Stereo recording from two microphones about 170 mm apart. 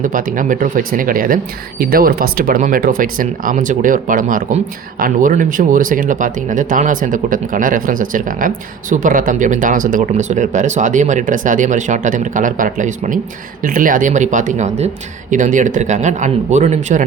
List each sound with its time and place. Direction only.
0.0 s speech: 55° right (ahead or behind)